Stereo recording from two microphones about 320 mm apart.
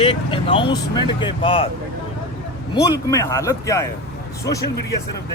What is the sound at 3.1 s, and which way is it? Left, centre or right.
Speech, centre.